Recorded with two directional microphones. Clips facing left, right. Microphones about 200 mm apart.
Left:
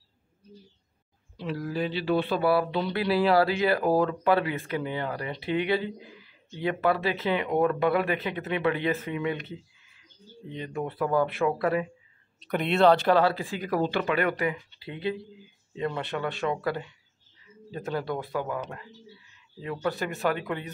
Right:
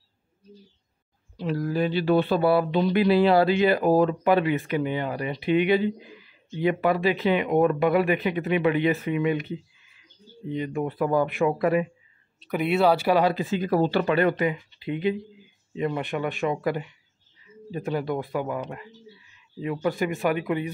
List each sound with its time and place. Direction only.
1.3 s speech: 45° right (ahead or behind)
2.4 s speech: 20° right (ahead or behind)